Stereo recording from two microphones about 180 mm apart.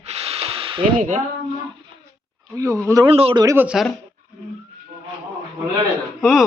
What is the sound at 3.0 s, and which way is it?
Speech, 30° right (ahead or behind).